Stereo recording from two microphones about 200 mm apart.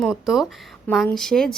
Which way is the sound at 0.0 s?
Centre (ahead or behind).